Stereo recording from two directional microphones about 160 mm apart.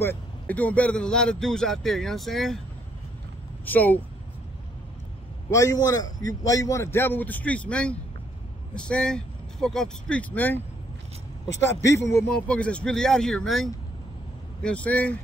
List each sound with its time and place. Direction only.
0.0 s speech: 10° left (ahead or behind)
3.6 s a man's voice: 10° left (ahead or behind)
5.5 s a man's voice: 20° left (ahead or behind)
11.8 s a man's voice: 20° left (ahead or behind)